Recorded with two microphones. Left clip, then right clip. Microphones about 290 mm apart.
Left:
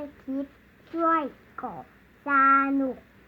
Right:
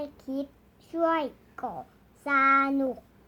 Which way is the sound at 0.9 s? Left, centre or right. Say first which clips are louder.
Left 2 dB; centre.